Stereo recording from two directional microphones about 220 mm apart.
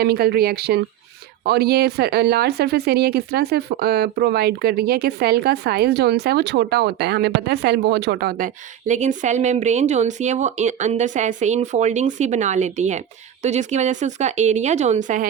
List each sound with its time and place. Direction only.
0.0 s speech: 45° right (ahead or behind)